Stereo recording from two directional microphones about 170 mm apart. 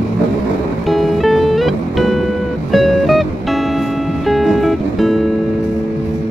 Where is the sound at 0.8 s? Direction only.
Centre (ahead or behind).